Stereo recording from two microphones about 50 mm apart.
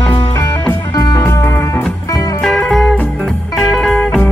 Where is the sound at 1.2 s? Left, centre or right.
Left.